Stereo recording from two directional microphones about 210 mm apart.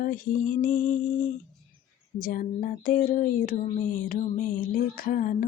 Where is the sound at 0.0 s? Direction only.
40° left (ahead or behind).